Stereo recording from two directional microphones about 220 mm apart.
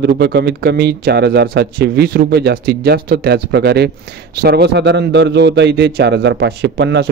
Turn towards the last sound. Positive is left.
turn(degrees=-50)  # may be behind; listen again after turning